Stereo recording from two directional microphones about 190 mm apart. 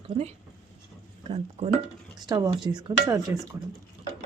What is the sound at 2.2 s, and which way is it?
A woman's voice, 20° right (ahead or behind).